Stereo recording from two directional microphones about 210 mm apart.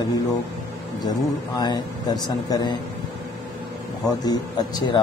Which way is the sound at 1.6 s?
20° left (ahead or behind).